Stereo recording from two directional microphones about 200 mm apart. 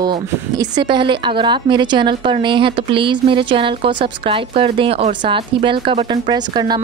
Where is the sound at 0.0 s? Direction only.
20° right (ahead or behind).